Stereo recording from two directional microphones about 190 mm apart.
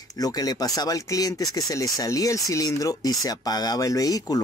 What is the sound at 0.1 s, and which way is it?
Speech, 20° left (ahead or behind).